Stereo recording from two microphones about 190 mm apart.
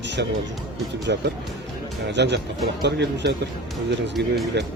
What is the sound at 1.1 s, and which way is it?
Speech, 60° right (ahead or behind).